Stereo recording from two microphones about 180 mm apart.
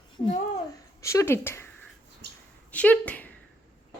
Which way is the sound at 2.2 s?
70° right (ahead or behind).